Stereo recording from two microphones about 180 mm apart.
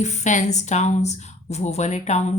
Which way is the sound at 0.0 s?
40° left (ahead or behind).